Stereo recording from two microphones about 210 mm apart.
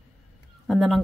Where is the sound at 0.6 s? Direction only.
Centre (ahead or behind).